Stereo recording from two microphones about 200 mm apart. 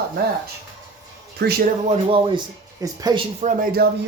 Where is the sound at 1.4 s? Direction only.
50° right (ahead or behind).